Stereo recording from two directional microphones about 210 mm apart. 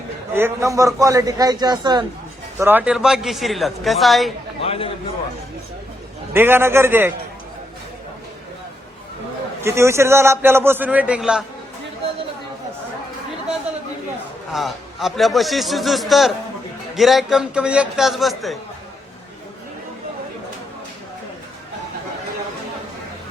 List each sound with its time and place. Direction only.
0.3 s a man's voice: 15° right (ahead or behind)
2.6 s a man's voice: 10° right (ahead or behind)
4.6 s a man's voice: 30° left (ahead or behind)
6.3 s a man's voice: 10° right (ahead or behind)
9.6 s a man's voice: 10° right (ahead or behind)
14.5 s a man's voice: centre (ahead or behind)